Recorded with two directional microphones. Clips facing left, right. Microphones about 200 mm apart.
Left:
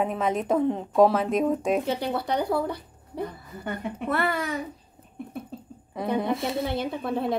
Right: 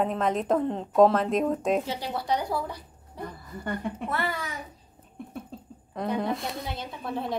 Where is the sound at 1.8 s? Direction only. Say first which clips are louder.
Left 4 dB; 55° left (ahead or behind).